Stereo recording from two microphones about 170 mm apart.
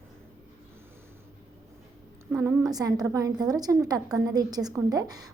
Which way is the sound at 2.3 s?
10° right (ahead or behind).